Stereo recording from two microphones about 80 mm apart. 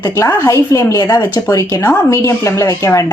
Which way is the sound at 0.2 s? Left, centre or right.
Left.